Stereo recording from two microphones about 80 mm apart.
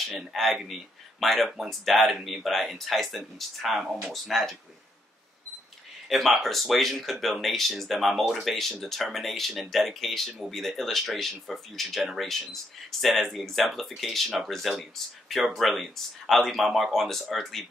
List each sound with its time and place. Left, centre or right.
0.2 s speech: centre
6.0 s speech: centre